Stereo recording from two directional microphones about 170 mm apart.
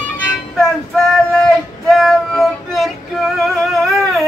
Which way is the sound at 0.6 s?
Centre (ahead or behind).